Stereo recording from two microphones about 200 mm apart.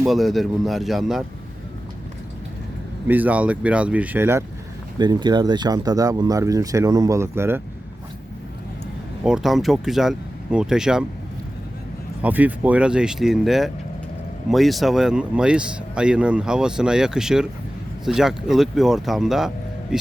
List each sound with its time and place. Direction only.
0.0 s speech: centre (ahead or behind)
3.1 s speech: 10° right (ahead or behind)
9.2 s speech: centre (ahead or behind)
12.2 s speech: 10° right (ahead or behind)